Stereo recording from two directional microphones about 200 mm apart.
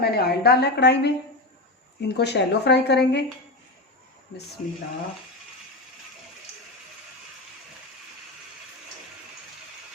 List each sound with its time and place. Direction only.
0.0 s speech: 50° left (ahead or behind)